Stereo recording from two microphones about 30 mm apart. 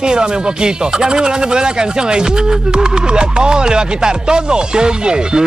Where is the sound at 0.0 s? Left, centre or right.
Right.